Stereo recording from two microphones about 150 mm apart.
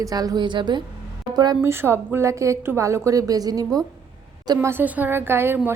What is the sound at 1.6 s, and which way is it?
Speech, 15° right (ahead or behind).